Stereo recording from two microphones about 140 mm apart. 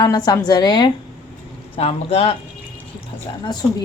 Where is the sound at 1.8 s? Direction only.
45° left (ahead or behind).